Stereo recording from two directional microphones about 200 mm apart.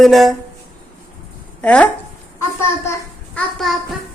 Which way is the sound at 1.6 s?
5° left (ahead or behind).